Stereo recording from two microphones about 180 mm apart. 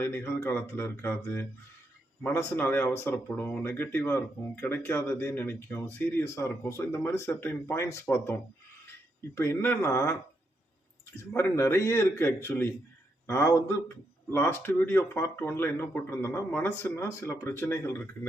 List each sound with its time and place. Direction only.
0.0 s speech: 10° left (ahead or behind)
11.2 s speech: 10° left (ahead or behind)